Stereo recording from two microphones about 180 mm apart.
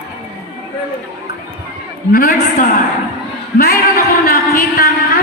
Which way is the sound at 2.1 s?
55° left (ahead or behind).